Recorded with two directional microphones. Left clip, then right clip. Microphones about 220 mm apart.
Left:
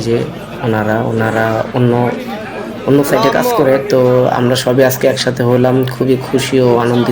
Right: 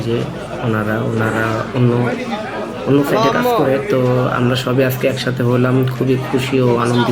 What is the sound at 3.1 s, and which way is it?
Speech, 5° left (ahead or behind).